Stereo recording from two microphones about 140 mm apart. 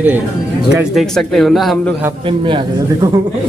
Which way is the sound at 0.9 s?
Centre (ahead or behind).